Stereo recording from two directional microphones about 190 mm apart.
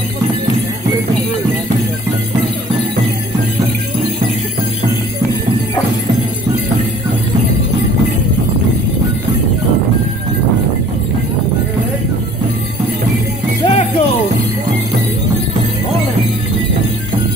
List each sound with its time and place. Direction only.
13.7 s jingle bell: 30° left (ahead or behind)